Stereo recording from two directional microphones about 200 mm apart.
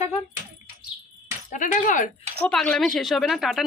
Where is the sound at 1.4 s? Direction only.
40° left (ahead or behind).